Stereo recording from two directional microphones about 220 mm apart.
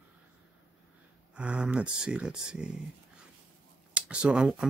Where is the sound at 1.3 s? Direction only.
5° right (ahead or behind).